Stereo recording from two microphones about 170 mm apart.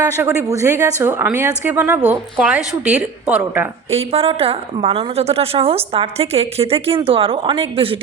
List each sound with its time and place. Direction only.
0.2 s a woman's voice: 15° right (ahead or behind)
3.9 s a woman's voice: 35° right (ahead or behind)